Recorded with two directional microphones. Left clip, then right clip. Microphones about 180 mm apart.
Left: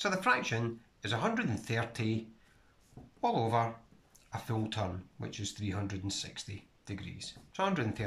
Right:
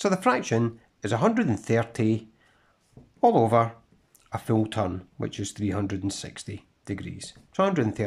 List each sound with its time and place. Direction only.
0.0 s speech: 35° right (ahead or behind)